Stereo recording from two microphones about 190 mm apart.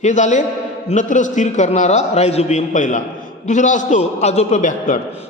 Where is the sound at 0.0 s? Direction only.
40° left (ahead or behind).